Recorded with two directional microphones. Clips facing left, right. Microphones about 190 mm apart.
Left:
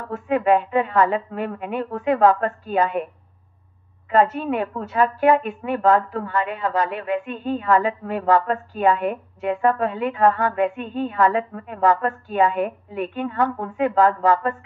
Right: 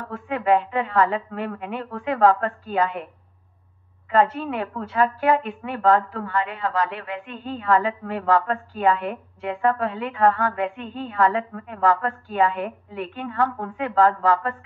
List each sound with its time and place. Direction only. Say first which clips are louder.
0.1 s a woman's voice: left 2 dB; 20° left (ahead or behind)
4.1 s a woman's voice: left 2 dB; 20° left (ahead or behind)